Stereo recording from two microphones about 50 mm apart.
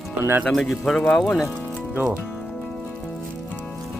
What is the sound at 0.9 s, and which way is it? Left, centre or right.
Speech, centre.